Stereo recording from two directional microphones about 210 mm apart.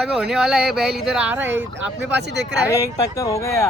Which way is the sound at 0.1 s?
Centre (ahead or behind).